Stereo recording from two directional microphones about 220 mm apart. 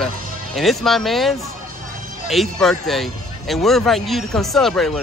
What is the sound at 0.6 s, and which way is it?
Speech, centre (ahead or behind).